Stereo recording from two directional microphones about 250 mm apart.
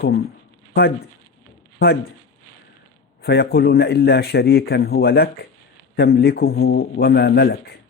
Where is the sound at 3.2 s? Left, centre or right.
Left.